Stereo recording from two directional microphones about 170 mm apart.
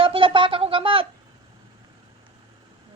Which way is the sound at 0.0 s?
30° right (ahead or behind).